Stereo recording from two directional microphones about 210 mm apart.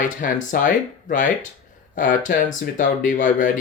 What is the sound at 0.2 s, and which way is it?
Speech, 40° left (ahead or behind).